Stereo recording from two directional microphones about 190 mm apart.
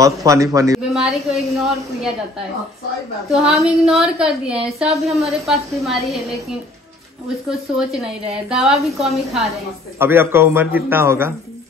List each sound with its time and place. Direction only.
0.0 s a man's voice: 15° right (ahead or behind)
0.7 s a woman's voice: centre (ahead or behind)
3.3 s a woman's voice: centre (ahead or behind)
7.4 s a woman's voice: 5° right (ahead or behind)
9.9 s a man's voice: 10° right (ahead or behind)